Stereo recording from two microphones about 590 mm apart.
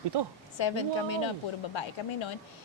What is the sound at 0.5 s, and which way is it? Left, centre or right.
A woman's voice, left.